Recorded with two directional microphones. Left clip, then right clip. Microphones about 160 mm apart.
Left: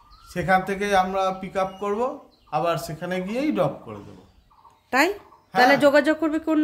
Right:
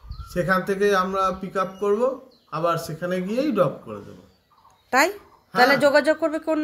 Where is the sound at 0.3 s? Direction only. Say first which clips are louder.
Left 1 dB; 20° left (ahead or behind).